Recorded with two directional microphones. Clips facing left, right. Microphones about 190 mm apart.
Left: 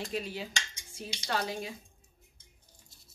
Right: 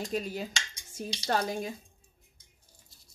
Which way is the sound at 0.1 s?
45° right (ahead or behind).